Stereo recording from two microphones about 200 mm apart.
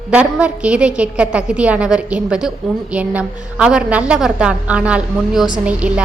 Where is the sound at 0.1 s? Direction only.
5° right (ahead or behind).